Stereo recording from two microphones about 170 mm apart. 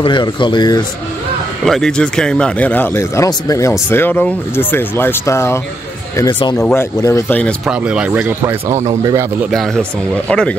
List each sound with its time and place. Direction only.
0.0 s speech: 30° left (ahead or behind)
1.6 s speech: 5° left (ahead or behind)
7.6 s speech: 5° right (ahead or behind)
9.5 s speech: 5° left (ahead or behind)